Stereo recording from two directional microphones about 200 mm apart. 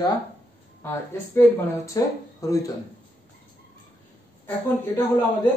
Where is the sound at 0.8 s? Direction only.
15° left (ahead or behind).